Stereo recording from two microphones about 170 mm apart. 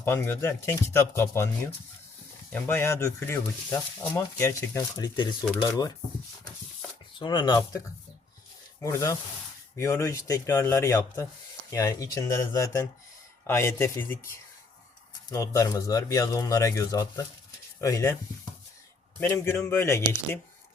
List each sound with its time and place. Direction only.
0.0 s speech: 15° left (ahead or behind)
2.5 s speech: 10° left (ahead or behind)
7.2 s speech: 25° left (ahead or behind)
8.8 s speech: 20° left (ahead or behind)
15.3 s speech: 20° left (ahead or behind)
19.2 s speech: 15° left (ahead or behind)